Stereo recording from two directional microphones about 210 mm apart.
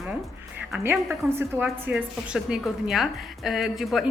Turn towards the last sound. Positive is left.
turn(degrees=0)  # may be behind; listen again after turning